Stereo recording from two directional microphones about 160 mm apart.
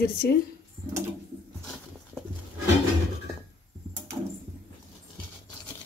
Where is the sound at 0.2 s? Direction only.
90° left.